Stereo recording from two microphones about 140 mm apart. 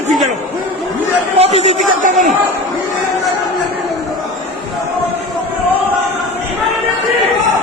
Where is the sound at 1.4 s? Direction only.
50° right (ahead or behind).